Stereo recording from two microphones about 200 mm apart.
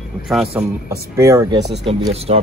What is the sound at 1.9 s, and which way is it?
Speech, 25° right (ahead or behind).